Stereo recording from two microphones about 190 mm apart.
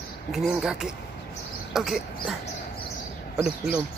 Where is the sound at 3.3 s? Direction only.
5° right (ahead or behind).